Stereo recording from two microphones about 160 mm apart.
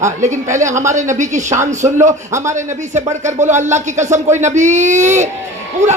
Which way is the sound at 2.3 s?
20° right (ahead or behind).